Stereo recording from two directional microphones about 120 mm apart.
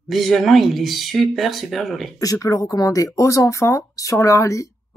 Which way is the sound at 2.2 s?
30° left (ahead or behind).